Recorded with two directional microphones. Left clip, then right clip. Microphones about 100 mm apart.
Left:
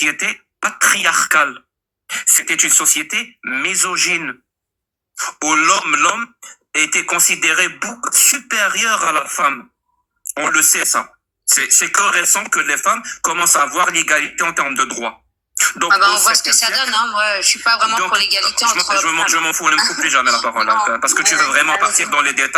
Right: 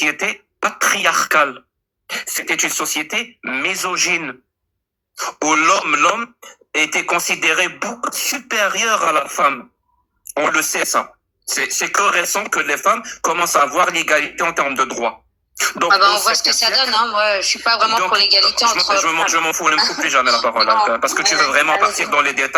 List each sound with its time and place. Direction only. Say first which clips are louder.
0.0 s speech: left 1 dB; 25° left (ahead or behind)